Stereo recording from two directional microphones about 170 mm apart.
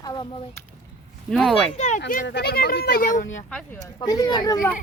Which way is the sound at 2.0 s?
75° left (ahead or behind).